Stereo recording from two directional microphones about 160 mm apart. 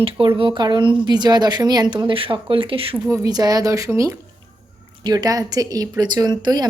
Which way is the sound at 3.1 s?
25° right (ahead or behind).